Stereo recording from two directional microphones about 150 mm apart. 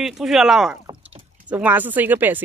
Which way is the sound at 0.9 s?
30° right (ahead or behind).